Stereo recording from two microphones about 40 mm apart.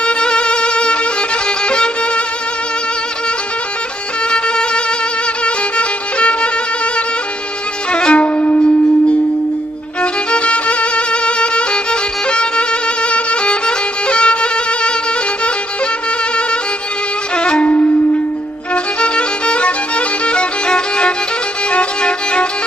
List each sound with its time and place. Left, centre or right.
0.0 s music: left
4.3 s music: left
7.9 s music: left
10.0 s violin: left
17.3 s music: left
18.7 s music: left
21.7 s violin: left